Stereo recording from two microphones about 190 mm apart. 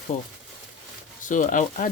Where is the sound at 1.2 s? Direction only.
40° left (ahead or behind).